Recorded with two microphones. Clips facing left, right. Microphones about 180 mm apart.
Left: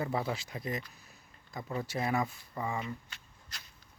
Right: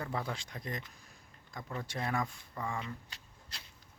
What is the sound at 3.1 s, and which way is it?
Shuffling cards, 30° right (ahead or behind).